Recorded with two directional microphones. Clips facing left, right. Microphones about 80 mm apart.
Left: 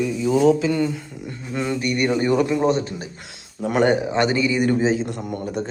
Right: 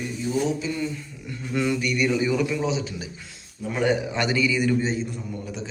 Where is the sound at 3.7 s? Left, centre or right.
Left.